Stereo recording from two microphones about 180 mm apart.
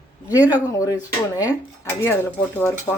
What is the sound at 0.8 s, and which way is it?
Speech, 20° left (ahead or behind).